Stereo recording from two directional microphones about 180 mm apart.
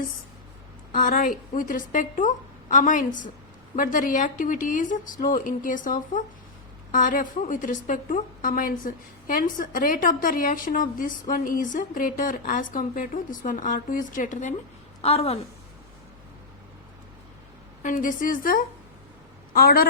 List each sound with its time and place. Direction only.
0.9 s a woman's voice: 50° left (ahead or behind)
15.0 s a woman's voice: 35° left (ahead or behind)
17.8 s a woman's voice: 45° left (ahead or behind)